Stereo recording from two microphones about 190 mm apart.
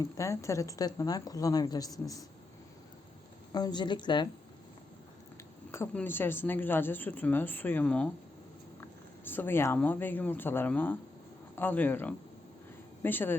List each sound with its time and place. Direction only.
0.0 s a woman's voice: 15° left (ahead or behind)
3.5 s a woman's voice: 20° left (ahead or behind)
5.7 s a woman's voice: 10° left (ahead or behind)